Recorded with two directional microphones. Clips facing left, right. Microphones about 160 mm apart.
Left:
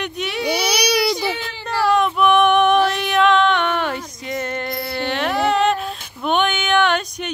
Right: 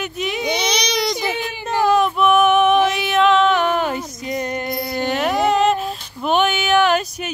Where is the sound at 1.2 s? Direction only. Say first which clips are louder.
Right 1 dB; 15° right (ahead or behind).